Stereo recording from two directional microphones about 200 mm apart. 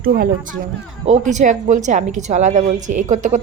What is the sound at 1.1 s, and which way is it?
Speech, 35° right (ahead or behind).